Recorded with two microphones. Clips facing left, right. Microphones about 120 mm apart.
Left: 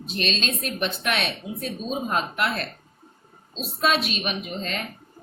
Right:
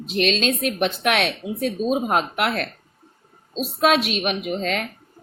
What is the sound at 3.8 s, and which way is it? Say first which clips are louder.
A woman's voice: right 5 dB; 75° right (ahead or behind).